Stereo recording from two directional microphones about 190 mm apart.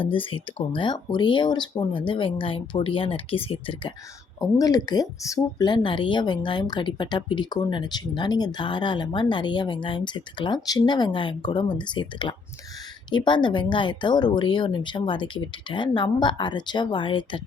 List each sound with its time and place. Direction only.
0.0 s speech: 25° left (ahead or behind)
4.4 s speech: 20° left (ahead or behind)